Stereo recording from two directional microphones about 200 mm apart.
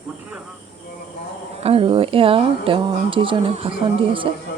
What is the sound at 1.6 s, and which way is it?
Speech, 30° right (ahead or behind).